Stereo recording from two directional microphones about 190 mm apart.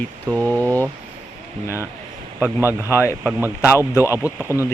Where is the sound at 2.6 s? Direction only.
10° right (ahead or behind).